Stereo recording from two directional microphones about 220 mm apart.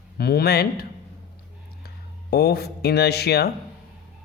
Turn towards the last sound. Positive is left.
turn(degrees=45)  # may be behind; listen again after turning